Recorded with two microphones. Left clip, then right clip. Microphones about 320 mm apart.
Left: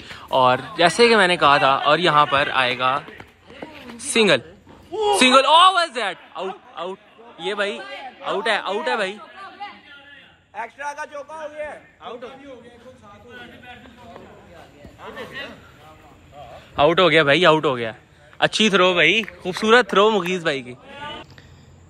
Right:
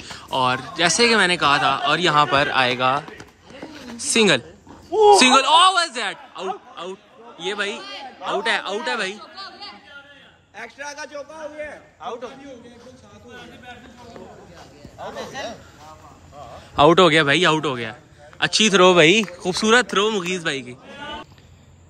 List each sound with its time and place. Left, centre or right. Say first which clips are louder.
0.0 s speech: left 4 dB; centre
4.1 s speech: even; centre
10.8 s speech: left 2 dB; centre
16.7 s speech: right 2 dB; centre